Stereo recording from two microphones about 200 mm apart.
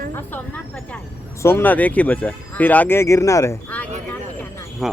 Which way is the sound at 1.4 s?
10° left (ahead or behind).